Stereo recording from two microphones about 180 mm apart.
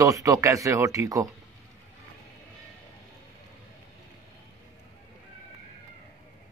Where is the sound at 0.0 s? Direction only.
20° right (ahead or behind).